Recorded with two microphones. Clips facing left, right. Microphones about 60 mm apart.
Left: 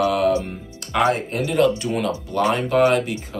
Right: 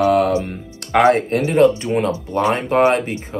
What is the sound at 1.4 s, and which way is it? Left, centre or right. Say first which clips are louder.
Speech: right 5 dB; right.